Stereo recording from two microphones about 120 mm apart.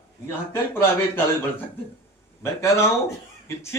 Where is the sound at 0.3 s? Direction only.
20° left (ahead or behind).